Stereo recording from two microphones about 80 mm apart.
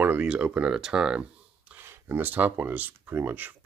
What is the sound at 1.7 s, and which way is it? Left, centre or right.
Speech, right.